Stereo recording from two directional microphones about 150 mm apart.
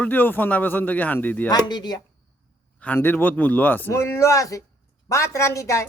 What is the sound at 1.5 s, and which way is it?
Speech, 25° left (ahead or behind).